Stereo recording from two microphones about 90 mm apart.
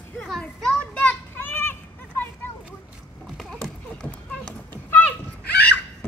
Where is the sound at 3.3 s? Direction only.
5° left (ahead or behind).